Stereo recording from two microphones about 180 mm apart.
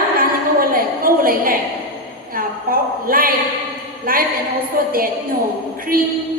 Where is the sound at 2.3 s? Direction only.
55° right (ahead or behind).